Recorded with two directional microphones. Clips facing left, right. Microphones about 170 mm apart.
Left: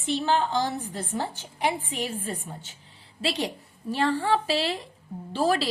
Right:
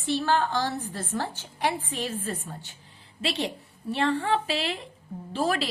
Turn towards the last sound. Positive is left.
turn(degrees=35)  # may be behind; listen again after turning